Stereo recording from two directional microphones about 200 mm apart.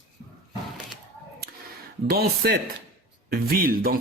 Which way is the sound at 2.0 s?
50° right (ahead or behind).